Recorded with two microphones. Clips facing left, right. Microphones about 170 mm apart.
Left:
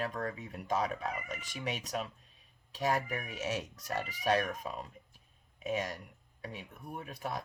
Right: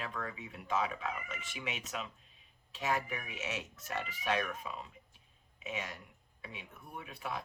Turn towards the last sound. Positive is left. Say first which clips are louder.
# left 3 dB
turn(degrees=40)  # may be behind; listen again after turning